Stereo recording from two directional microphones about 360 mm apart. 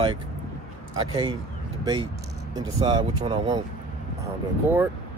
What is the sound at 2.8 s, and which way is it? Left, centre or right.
Speech, centre.